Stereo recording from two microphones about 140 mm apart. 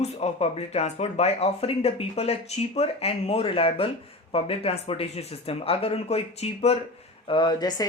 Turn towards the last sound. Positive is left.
turn(degrees=30)  # may be behind; listen again after turning